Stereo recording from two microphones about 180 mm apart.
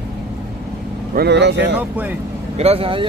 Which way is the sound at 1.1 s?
70° right (ahead or behind).